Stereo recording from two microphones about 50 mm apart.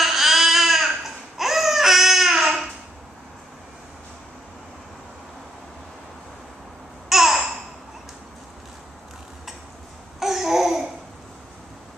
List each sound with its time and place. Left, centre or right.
0.0 s baby cry: centre
7.1 s babbling: centre
10.2 s babbling: centre